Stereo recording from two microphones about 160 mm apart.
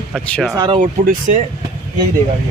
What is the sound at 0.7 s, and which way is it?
Speech, 55° right (ahead or behind).